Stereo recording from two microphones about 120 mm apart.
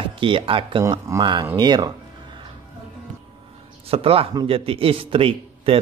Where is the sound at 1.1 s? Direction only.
25° right (ahead or behind).